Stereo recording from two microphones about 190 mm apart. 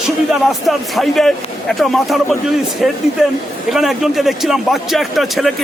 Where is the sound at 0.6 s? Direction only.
Centre (ahead or behind).